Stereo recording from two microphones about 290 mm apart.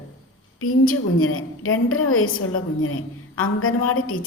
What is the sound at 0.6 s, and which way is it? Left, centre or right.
A woman's voice, left.